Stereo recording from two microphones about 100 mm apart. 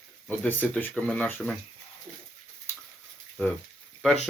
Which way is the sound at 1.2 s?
20° left (ahead or behind).